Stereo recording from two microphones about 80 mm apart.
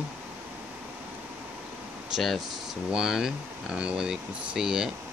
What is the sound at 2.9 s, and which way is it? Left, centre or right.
Speech, centre.